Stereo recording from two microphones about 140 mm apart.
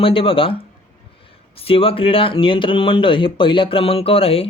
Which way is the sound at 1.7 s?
40° left (ahead or behind).